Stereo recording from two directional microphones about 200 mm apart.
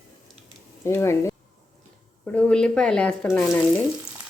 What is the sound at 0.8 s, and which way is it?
Speech, 15° left (ahead or behind).